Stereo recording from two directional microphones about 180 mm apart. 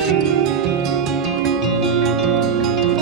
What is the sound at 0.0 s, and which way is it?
Music, centre (ahead or behind).